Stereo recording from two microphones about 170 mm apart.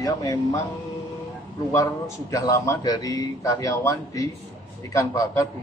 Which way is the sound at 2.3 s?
20° left (ahead or behind).